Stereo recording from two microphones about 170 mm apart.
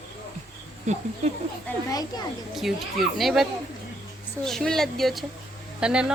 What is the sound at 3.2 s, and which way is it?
Speech, centre (ahead or behind).